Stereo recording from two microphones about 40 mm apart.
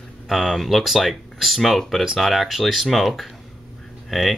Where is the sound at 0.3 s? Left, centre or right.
Centre.